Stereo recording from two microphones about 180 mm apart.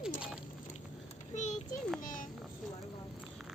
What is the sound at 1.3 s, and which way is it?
Speech, 40° left (ahead or behind).